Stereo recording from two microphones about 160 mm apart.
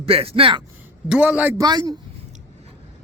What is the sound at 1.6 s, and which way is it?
Speech, 25° right (ahead or behind).